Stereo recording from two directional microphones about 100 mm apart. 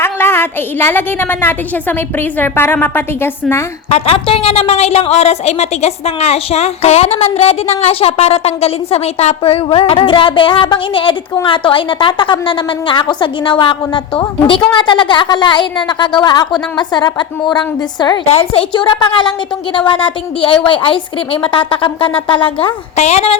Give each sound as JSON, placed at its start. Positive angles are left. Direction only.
{"t": 0.0, "sound": "a woman's voice", "side_deg": 25}
{"t": 3.8, "sound": "a woman's voice", "side_deg": 85}
{"t": 18.3, "sound": "a woman's voice", "side_deg": 75}
{"t": 18.7, "sound": "a woman's voice", "side_deg": 50}